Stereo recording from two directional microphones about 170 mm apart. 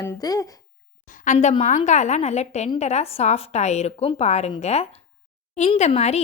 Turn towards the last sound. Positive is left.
turn(degrees=40)  # may be behind; listen again after turning